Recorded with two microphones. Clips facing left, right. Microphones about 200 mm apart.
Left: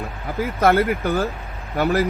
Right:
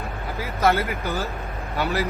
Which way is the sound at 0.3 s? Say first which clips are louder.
Left 5 dB; 55° left (ahead or behind).